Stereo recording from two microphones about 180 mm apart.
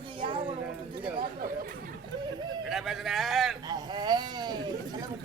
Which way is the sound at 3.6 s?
25° right (ahead or behind).